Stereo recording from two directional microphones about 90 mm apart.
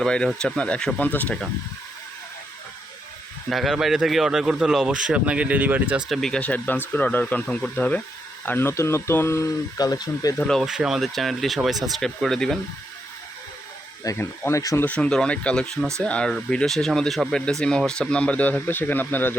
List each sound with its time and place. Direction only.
0.0 s speech: 10° left (ahead or behind)
3.5 s speech: 5° right (ahead or behind)
6.1 s speech: 5° left (ahead or behind)
6.4 s speech: 15° left (ahead or behind)
9.7 s speech: 45° left (ahead or behind)
10.6 s speech: 5° right (ahead or behind)
14.2 s speech: 30° left (ahead or behind)
14.8 s speech: 15° left (ahead or behind)